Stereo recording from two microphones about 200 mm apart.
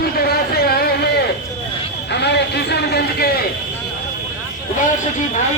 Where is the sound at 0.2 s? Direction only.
50° left (ahead or behind).